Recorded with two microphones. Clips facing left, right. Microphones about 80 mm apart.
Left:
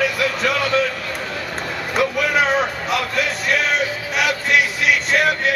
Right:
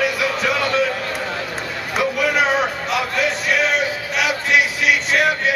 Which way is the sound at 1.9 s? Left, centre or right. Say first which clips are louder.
Even; centre.